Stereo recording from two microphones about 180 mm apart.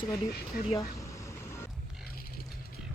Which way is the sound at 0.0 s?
50° left (ahead or behind).